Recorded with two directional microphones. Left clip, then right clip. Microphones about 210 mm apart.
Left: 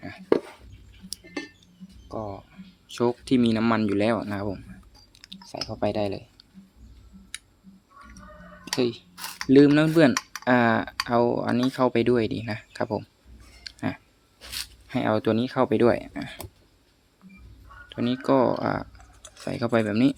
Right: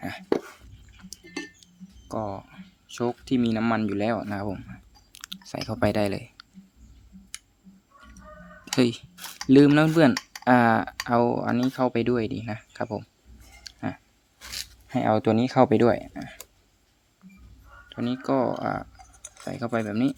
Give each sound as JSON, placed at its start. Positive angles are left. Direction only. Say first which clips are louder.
{"t": 1.6, "sound": "music", "louder": "right 2 dB", "side_deg": -30}
{"t": 2.9, "sound": "speech", "louder": "left 3 dB", "side_deg": 0}
{"t": 5.2, "sound": "speech", "louder": "right 1 dB", "side_deg": -30}
{"t": 8.7, "sound": "speech", "louder": "right 2 dB", "side_deg": -30}
{"t": 9.5, "sound": "speech", "louder": "even", "side_deg": -15}
{"t": 13.7, "sound": "a sound", "louder": "left 2 dB", "side_deg": 0}
{"t": 14.8, "sound": "speech", "louder": "right 1 dB", "side_deg": -10}
{"t": 17.8, "sound": "speech", "louder": "left 3 dB", "side_deg": 5}